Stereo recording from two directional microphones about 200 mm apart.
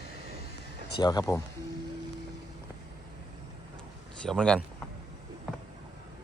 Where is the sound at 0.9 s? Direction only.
20° left (ahead or behind).